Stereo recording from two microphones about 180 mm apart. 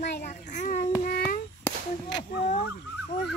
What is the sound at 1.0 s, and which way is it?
Child singing, 55° left (ahead or behind).